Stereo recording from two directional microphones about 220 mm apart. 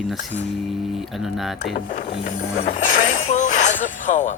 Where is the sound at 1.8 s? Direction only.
35° left (ahead or behind).